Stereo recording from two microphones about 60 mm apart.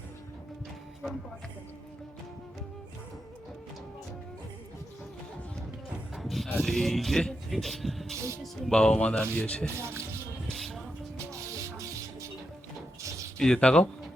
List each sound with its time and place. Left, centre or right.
6.1 s a sound: centre
6.6 s speech: centre
8.1 s speech: right
8.7 s speech: centre
10.5 s music: centre
11.3 s music: right
13.0 s a sound: right
13.4 s speech: centre